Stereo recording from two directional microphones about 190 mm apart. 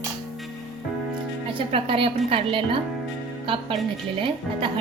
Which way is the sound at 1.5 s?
30° right (ahead or behind).